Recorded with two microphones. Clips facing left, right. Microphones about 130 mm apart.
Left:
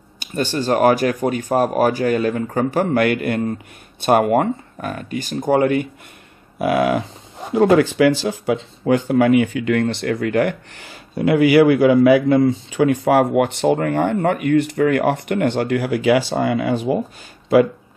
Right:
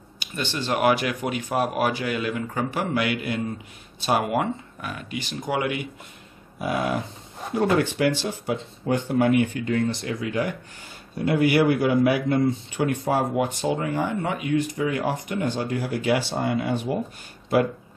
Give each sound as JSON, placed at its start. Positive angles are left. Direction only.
{"t": 0.2, "sound": "speech", "side_deg": 45}
{"t": 6.6, "sound": "speech", "side_deg": 85}
{"t": 13.0, "sound": "speech", "side_deg": 70}